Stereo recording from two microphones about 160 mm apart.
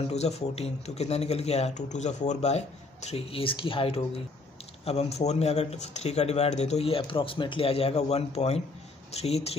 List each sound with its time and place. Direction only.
0.0 s speech: 40° left (ahead or behind)